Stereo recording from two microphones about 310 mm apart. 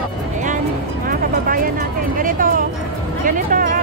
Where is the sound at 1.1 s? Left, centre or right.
Right.